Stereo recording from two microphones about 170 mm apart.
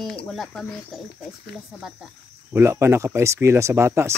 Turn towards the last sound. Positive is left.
turn(degrees=-15)  # may be behind; listen again after turning